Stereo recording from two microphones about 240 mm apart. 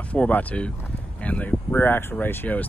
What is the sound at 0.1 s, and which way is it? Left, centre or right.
Speech, centre.